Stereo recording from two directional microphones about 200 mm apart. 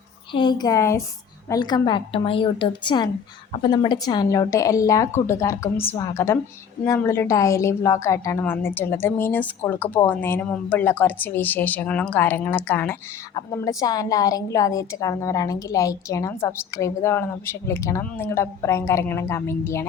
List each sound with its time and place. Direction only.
0.3 s a woman's voice: 20° left (ahead or behind)